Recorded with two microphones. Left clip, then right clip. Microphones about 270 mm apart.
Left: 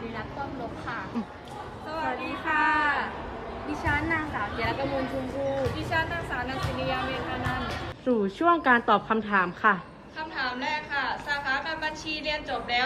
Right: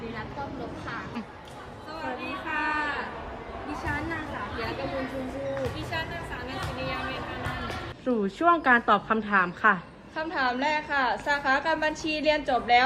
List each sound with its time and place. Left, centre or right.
2.0 s chatter: centre
3.7 s a woman's voice: centre
10.2 s a woman's voice: centre